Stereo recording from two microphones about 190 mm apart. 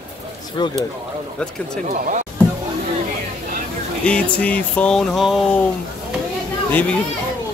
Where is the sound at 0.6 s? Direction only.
25° left (ahead or behind).